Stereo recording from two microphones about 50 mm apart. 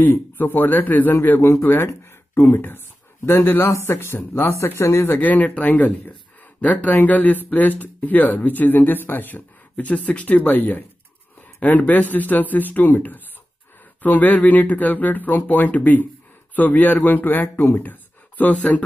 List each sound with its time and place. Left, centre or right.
0.0 s a man's voice: left
4.6 s speech: left
5.2 s speech: left